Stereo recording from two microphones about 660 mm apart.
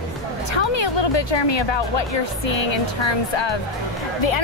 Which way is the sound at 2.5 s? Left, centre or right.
Left.